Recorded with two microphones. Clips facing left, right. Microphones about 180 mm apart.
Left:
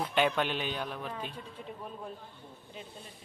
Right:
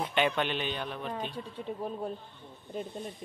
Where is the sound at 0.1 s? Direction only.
5° left (ahead or behind).